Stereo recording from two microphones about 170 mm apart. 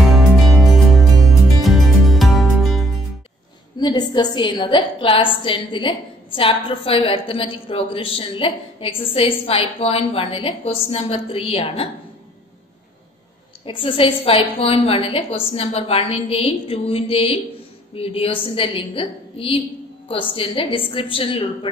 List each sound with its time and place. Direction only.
0.0 s music: centre (ahead or behind)
3.8 s a woman's voice: 25° left (ahead or behind)
13.7 s a woman's voice: 30° left (ahead or behind)